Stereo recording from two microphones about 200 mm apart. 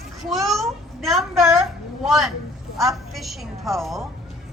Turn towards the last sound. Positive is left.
turn(degrees=0)  # may be behind; listen again after turning